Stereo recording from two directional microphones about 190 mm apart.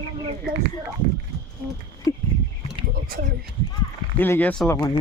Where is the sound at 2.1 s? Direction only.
15° left (ahead or behind).